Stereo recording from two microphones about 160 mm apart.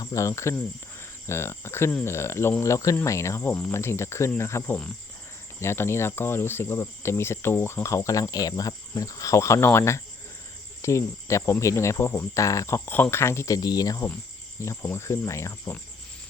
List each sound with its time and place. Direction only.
0.0 s speech: 20° left (ahead or behind)